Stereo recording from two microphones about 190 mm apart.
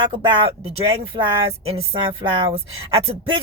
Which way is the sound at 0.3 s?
30° right (ahead or behind).